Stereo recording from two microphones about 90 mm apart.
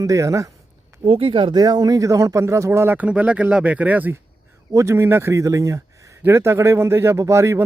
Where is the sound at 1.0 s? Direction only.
90° right.